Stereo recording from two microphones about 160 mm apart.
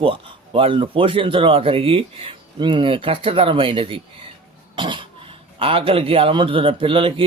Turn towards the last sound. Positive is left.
turn(degrees=-35)  # may be behind; listen again after turning